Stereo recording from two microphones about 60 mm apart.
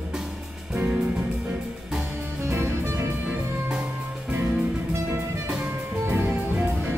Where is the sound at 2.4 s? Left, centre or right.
Right.